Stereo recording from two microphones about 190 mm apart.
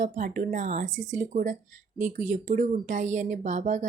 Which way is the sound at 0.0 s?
40° right (ahead or behind).